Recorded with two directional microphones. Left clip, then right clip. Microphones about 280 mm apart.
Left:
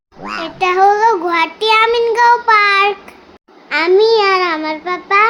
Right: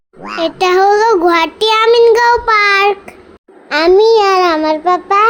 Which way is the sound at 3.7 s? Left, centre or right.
Centre.